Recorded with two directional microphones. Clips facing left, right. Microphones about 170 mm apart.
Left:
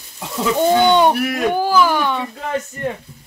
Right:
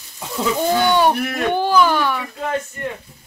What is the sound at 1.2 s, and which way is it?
Speech, 10° left (ahead or behind).